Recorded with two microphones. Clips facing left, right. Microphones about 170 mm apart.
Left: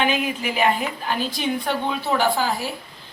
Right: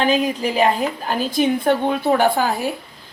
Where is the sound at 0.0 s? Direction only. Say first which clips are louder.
Right 4 dB; 35° right (ahead or behind); by 2.7 s 55° right (ahead or behind).